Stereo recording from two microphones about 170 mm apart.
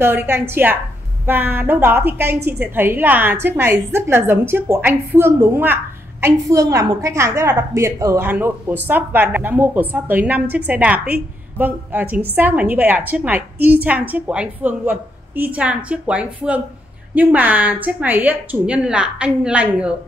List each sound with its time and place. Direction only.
0.0 s a woman's voice: 15° right (ahead or behind)